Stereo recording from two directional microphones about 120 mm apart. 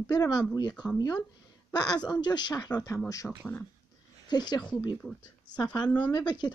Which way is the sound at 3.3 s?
15° left (ahead or behind).